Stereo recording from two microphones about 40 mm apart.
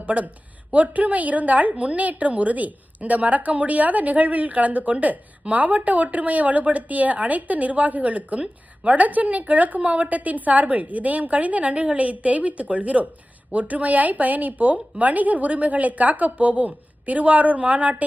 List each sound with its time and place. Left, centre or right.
0.0 s a woman's voice: right